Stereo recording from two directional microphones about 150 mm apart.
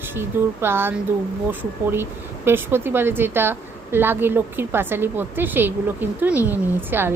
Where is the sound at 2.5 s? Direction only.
15° right (ahead or behind).